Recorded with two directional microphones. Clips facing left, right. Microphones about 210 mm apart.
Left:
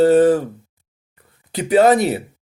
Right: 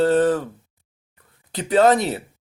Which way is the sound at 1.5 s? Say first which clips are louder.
Left 3 dB; 10° left (ahead or behind).